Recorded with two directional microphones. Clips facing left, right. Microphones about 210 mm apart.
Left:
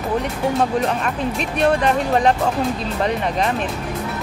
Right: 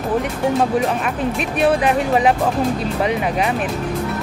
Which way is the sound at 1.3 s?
5° right (ahead or behind).